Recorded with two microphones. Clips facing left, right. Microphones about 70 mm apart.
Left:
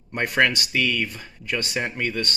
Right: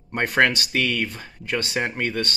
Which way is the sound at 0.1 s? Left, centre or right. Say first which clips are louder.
Right 1 dB; right.